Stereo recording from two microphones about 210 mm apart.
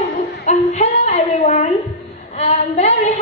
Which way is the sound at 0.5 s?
30° left (ahead or behind).